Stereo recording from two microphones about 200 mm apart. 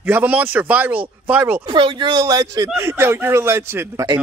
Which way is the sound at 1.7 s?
25° right (ahead or behind).